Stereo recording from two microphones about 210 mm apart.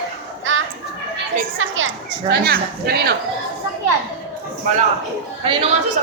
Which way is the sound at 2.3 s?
50° right (ahead or behind).